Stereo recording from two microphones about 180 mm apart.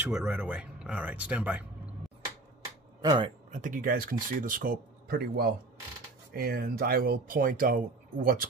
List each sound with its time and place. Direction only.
0.0 s speech: 10° right (ahead or behind)
3.0 s speech: 20° right (ahead or behind)
3.6 s speech: 50° right (ahead or behind)